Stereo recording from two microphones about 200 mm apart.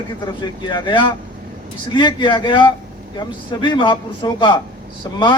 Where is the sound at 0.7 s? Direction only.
25° left (ahead or behind).